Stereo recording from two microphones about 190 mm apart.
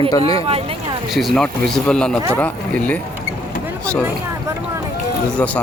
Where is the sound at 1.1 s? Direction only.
Centre (ahead or behind).